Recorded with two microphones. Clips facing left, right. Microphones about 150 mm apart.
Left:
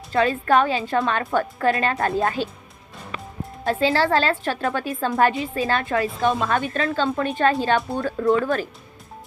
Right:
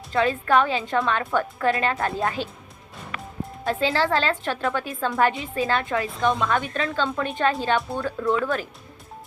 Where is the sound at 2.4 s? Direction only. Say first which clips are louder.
Left 4 dB; 15° right (ahead or behind).